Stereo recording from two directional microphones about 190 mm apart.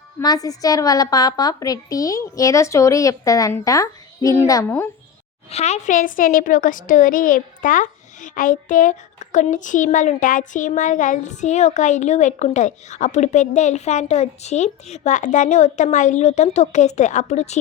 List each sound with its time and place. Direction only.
0.2 s a woman's voice: 20° left (ahead or behind)
5.5 s a child's voice: 35° left (ahead or behind)